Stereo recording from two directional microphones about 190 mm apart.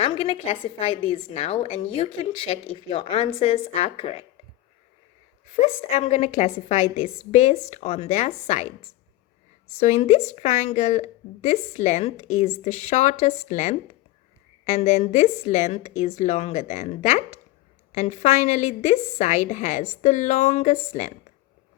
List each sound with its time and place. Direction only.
0.0 s a woman's voice: 30° left (ahead or behind)
5.5 s a woman's voice: 35° left (ahead or behind)
9.7 s a woman's voice: 35° left (ahead or behind)